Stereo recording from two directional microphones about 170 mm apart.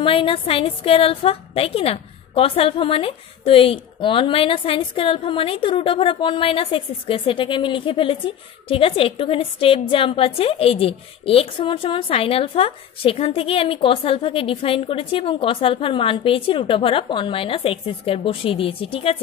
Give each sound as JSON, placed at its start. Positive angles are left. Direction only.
{"t": 0.0, "sound": "a woman's voice", "side_deg": 30}